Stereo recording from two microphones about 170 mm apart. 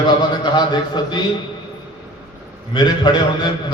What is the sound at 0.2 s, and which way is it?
A man's voice, 25° left (ahead or behind).